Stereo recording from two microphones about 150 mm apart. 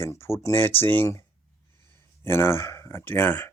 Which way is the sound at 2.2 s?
15° left (ahead or behind).